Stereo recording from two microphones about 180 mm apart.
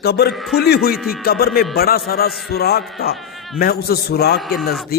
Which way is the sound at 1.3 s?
55° left (ahead or behind).